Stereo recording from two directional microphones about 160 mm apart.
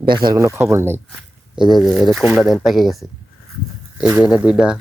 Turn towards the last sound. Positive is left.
turn(degrees=-5)  # may be behind; listen again after turning